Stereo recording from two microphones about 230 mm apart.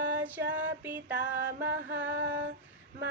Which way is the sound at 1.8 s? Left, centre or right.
Right.